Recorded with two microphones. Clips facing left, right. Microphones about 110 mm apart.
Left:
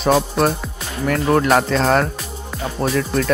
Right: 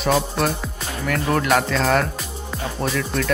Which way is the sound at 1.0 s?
35° left (ahead or behind).